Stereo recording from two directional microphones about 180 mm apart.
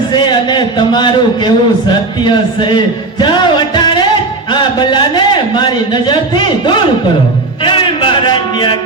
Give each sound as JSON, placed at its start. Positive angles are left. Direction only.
{"t": 0.1, "sound": "a man's voice", "side_deg": 25}